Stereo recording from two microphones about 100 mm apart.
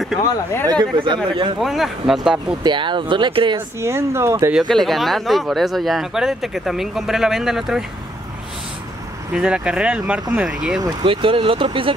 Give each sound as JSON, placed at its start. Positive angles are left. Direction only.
{"t": 0.7, "sound": "speech", "side_deg": -50}
{"t": 1.6, "sound": "speech", "side_deg": 0}
{"t": 2.6, "sound": "speech", "side_deg": -50}
{"t": 3.5, "sound": "speech", "side_deg": -25}
{"t": 4.6, "sound": "speech", "side_deg": 5}
{"t": 9.3, "sound": "speech", "side_deg": -10}
{"t": 11.1, "sound": "speech", "side_deg": -60}